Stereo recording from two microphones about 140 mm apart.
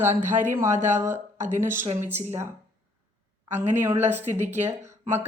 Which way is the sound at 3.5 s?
15° right (ahead or behind).